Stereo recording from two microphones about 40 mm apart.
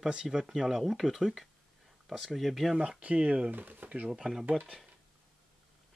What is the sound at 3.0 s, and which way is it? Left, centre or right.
Speech, right.